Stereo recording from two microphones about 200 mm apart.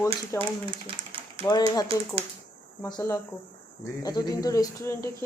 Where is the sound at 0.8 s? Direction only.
25° right (ahead or behind).